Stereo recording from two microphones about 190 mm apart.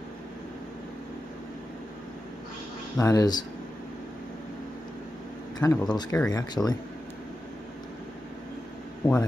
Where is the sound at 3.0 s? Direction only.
20° left (ahead or behind).